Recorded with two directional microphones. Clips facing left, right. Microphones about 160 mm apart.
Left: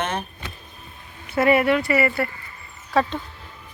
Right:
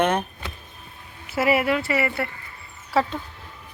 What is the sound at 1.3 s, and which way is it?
A woman's voice, 5° right (ahead or behind).